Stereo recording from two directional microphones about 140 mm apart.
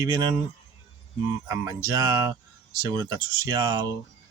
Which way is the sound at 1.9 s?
30° right (ahead or behind).